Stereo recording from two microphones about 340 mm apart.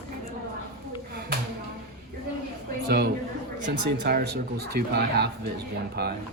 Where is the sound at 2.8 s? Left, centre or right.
Right.